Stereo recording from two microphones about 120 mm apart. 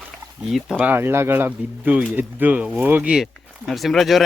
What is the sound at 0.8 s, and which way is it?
Speech, 15° right (ahead or behind).